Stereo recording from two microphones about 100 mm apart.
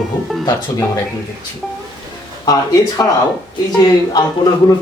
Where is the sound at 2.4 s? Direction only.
35° left (ahead or behind).